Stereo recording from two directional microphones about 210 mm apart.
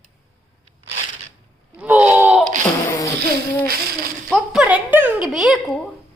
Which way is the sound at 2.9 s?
15° left (ahead or behind).